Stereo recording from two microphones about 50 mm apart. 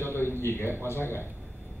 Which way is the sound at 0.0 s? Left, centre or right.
Left.